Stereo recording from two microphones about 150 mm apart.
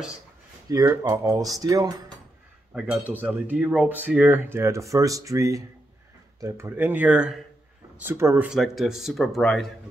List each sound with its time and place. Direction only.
0.7 s speech: 25° right (ahead or behind)
2.7 s speech: 5° right (ahead or behind)
8.0 s speech: 15° right (ahead or behind)
8.5 s speech: centre (ahead or behind)